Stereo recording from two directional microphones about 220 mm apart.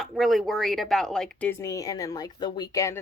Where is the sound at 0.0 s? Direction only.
Centre (ahead or behind).